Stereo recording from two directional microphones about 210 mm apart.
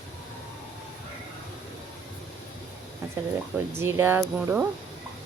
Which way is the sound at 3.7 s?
10° right (ahead or behind).